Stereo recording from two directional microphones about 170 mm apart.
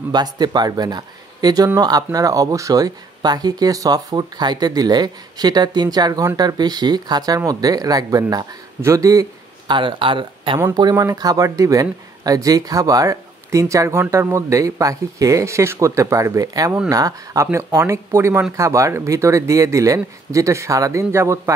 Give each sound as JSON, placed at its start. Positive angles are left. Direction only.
{"t": 0.1, "sound": "speech", "side_deg": -25}